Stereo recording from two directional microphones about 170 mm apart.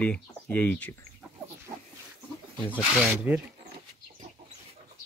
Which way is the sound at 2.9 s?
10° right (ahead or behind).